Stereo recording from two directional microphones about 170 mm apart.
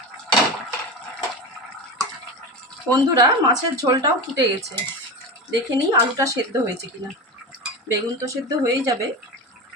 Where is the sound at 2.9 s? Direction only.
25° right (ahead or behind).